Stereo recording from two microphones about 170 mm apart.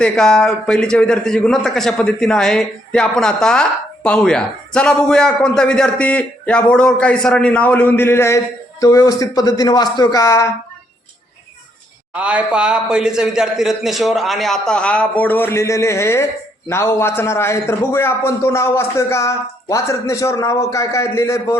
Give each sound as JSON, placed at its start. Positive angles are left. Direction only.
{"t": 0.0, "sound": "a man's voice", "side_deg": 5}
{"t": 12.1, "sound": "a man's voice", "side_deg": -10}